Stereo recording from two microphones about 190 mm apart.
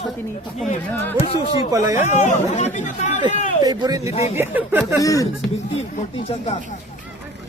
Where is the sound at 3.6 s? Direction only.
20° right (ahead or behind).